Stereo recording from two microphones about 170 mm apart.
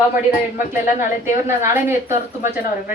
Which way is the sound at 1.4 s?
15° right (ahead or behind).